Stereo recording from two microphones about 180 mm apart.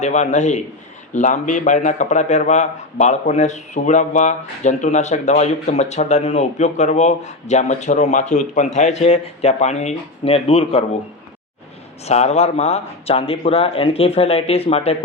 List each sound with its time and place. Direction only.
0.0 s a man's voice: 40° left (ahead or behind)
12.0 s a man's voice: 35° left (ahead or behind)